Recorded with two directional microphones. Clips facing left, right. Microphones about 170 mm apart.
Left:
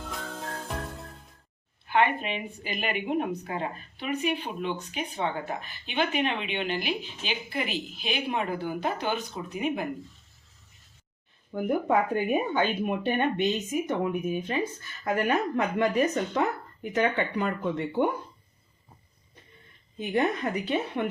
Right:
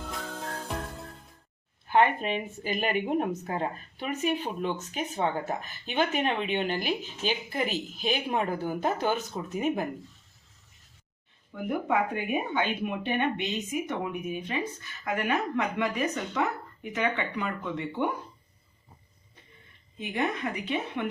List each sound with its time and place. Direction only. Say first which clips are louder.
0.0 s music: even; centre (ahead or behind)
1.9 s speech: right 1 dB; 45° right (ahead or behind)
11.9 s speech: left 2 dB; 40° left (ahead or behind)
20.0 s speech: left 4 dB; 40° left (ahead or behind)